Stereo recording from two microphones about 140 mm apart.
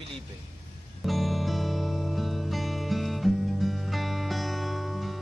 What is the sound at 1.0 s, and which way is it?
Music, centre (ahead or behind).